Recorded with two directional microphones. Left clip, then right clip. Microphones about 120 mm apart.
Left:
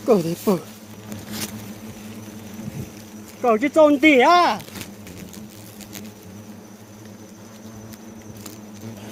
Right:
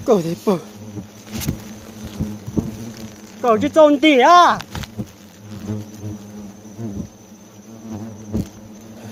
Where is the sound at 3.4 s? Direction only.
25° right (ahead or behind).